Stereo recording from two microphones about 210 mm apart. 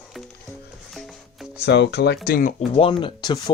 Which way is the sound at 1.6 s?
55° left (ahead or behind).